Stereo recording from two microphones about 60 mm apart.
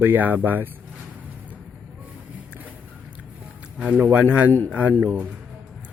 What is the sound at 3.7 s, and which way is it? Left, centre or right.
Speech, right.